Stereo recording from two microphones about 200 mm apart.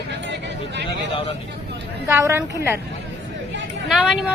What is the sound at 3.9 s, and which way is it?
Speech, centre (ahead or behind).